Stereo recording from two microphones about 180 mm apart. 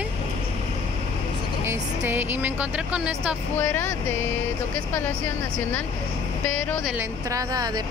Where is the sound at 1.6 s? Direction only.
15° right (ahead or behind).